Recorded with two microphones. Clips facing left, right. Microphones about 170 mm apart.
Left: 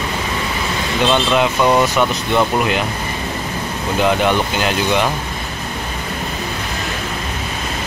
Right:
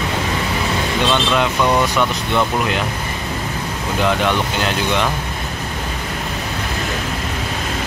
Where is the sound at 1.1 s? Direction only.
5° left (ahead or behind).